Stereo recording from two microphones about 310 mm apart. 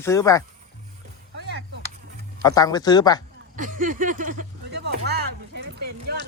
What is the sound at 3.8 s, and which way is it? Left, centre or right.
Speech, right.